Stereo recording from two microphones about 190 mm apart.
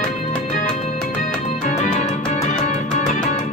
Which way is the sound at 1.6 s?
40° left (ahead or behind).